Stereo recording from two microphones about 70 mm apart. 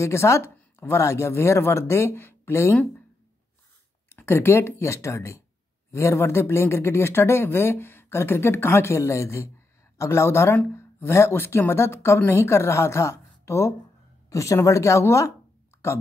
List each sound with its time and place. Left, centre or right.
0.0 s speech: left
4.1 s a woman's voice: left